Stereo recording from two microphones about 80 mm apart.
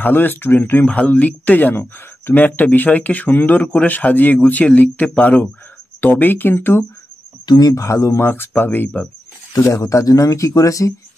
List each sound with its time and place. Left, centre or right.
0.0 s speech: left
7.4 s speech: left
7.7 s speech: left
9.5 s speech: left